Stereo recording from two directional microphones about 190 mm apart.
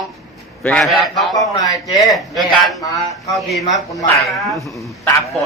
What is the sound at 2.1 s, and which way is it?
Speech, centre (ahead or behind).